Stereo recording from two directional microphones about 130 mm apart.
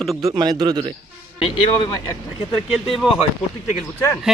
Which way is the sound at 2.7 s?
5° right (ahead or behind).